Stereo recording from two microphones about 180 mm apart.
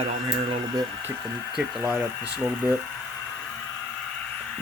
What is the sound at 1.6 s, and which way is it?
Speech, 5° right (ahead or behind).